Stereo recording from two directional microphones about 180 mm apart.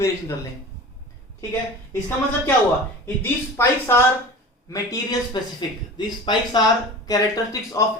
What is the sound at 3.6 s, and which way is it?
Speech, 15° left (ahead or behind).